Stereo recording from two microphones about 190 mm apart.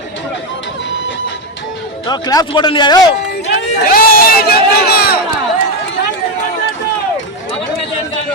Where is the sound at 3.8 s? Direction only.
50° left (ahead or behind).